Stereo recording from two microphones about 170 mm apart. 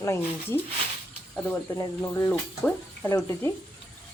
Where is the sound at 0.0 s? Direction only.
15° left (ahead or behind).